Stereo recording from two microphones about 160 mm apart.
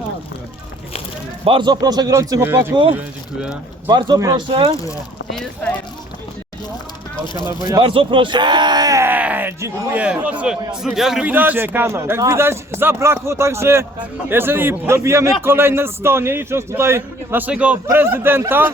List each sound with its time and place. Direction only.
1.5 s speech: 30° right (ahead or behind)
3.8 s speech: 25° right (ahead or behind)
7.4 s a man's voice: 25° right (ahead or behind)